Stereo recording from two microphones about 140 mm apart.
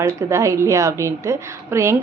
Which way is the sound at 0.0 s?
20° right (ahead or behind).